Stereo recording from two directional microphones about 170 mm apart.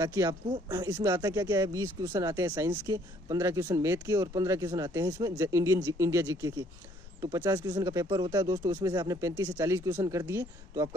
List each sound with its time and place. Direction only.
0.0 s speech: 20° right (ahead or behind)